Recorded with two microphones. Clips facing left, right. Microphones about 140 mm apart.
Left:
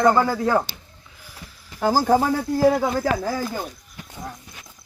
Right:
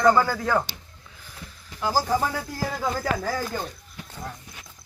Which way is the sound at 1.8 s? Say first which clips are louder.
Left 6 dB; 50° left (ahead or behind).